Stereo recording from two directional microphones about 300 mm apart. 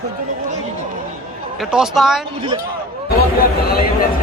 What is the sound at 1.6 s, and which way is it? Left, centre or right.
Speech, centre.